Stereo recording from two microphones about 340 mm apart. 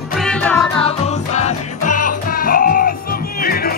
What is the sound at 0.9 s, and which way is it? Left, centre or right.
Music, centre.